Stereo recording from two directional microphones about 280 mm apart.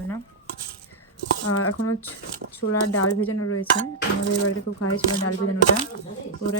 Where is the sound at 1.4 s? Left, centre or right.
Left.